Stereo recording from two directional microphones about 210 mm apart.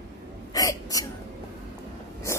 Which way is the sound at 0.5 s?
15° left (ahead or behind).